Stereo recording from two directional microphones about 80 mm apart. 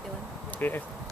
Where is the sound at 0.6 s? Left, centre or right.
Left.